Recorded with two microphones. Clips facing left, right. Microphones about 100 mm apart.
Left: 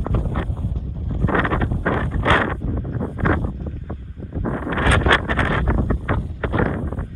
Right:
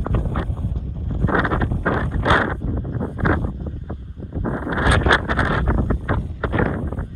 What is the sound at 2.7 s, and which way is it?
Wind noise, centre (ahead or behind).